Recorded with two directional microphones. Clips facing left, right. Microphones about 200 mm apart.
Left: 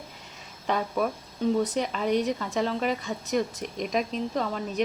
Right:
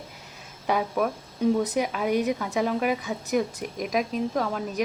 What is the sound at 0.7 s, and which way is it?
A woman's voice, 10° right (ahead or behind).